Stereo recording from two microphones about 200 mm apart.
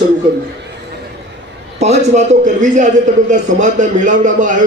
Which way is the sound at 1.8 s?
35° right (ahead or behind).